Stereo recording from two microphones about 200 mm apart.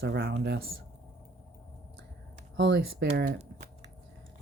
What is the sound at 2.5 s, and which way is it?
Speech, 55° right (ahead or behind).